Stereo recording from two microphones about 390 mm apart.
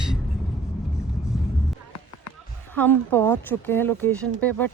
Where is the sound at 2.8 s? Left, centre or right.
Centre.